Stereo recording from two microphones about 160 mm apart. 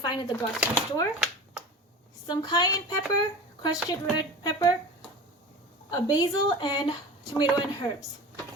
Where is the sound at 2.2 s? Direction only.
25° left (ahead or behind).